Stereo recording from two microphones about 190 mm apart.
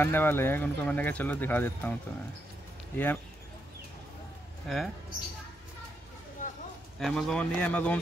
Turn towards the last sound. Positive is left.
turn(degrees=5)  # may be behind; listen again after turning